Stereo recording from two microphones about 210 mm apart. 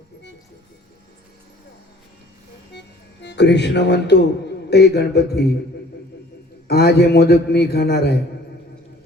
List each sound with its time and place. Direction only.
2.7 s music: 55° left (ahead or behind)
4.7 s a man's voice: 50° left (ahead or behind)
6.7 s a man's voice: 50° left (ahead or behind)